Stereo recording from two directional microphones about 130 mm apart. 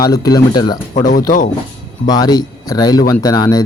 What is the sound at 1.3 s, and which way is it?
Speech, 90° left.